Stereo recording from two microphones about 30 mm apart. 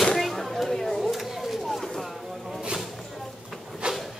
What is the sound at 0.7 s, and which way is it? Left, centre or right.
Speech, centre.